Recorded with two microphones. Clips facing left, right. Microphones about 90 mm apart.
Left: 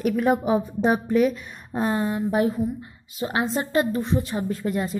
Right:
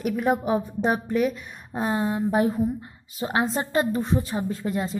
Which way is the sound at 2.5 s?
40° right (ahead or behind).